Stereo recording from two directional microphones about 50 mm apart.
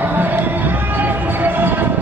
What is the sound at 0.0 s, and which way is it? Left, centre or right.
Music, right.